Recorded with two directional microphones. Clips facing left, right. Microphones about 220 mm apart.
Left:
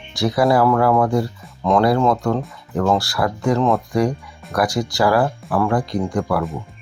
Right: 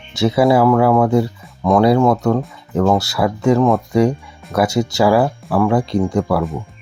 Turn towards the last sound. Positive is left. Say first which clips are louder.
# right 4 dB
turn(degrees=-20)  # may be behind; listen again after turning